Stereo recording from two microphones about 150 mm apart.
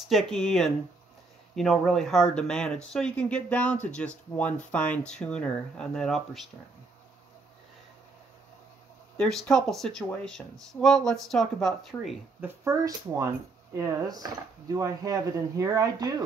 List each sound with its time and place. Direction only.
0.1 s speech: centre (ahead or behind)
9.1 s speech: 5° left (ahead or behind)
12.4 s speech: 20° right (ahead or behind)